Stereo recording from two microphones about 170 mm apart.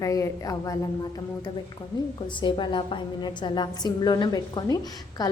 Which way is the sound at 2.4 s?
30° left (ahead or behind).